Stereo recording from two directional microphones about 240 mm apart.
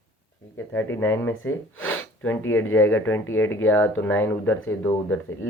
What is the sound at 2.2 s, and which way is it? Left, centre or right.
Speech, centre.